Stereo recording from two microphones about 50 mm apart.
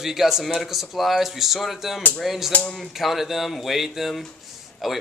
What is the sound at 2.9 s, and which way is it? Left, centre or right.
Speech, centre.